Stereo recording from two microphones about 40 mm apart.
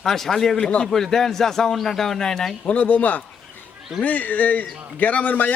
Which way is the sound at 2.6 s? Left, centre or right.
Left.